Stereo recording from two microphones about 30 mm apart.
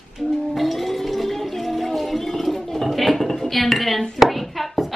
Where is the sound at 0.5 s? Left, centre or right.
Centre.